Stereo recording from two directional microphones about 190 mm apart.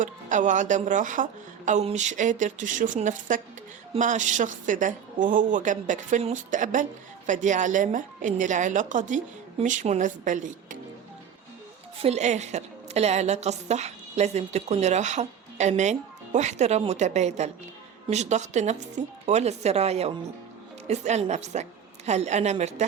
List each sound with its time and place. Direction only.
0.0 s a woman's voice: 40° right (ahead or behind)
11.9 s a woman's voice: 35° right (ahead or behind)